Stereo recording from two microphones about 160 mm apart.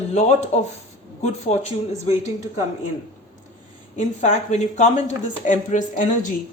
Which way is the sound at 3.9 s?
45° left (ahead or behind).